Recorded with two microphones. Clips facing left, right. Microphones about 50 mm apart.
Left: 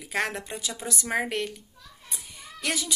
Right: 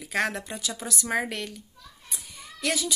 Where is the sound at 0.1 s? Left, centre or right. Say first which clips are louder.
Right 1 dB; left.